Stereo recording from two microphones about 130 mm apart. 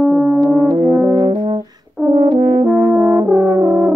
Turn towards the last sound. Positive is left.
turn(degrees=-20)  # may be behind; listen again after turning